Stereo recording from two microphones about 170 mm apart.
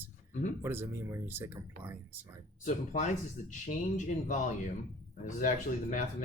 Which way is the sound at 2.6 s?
45° left (ahead or behind).